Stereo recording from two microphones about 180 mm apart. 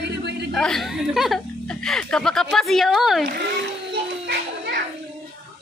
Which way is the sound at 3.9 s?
70° right (ahead or behind).